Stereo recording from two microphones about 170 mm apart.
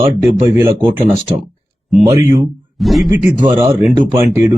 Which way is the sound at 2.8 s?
Centre (ahead or behind).